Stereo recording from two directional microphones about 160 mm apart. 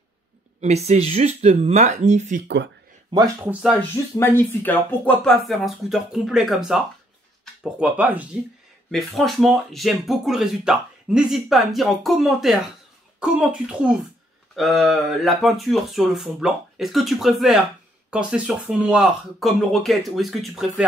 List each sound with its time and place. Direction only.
0.6 s speech: 45° right (ahead or behind)
3.1 s speech: 25° right (ahead or behind)
3.9 s speech: 15° left (ahead or behind); by 8.3 s 10° right (ahead or behind)
8.9 s speech: centre (ahead or behind)